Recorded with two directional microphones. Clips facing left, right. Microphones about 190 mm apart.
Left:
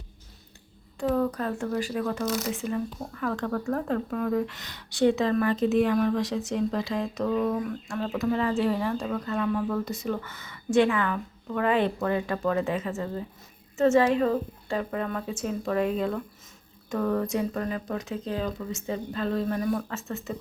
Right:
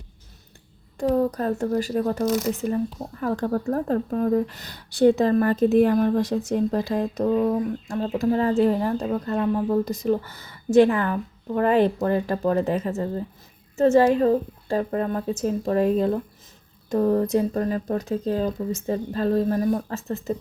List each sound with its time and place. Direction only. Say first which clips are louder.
0.9 s speech: right 4 dB; 35° right (ahead or behind)
5.5 s speech: right 5 dB; 55° right (ahead or behind)
5.8 s speech: right 4 dB; 40° right (ahead or behind)